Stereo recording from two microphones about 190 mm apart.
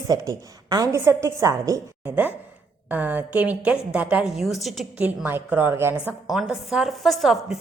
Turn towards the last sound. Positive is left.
turn(degrees=0)  # may be behind; listen again after turning